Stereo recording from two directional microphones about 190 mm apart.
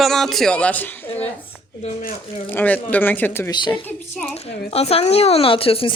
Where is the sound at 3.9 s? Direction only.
5° left (ahead or behind).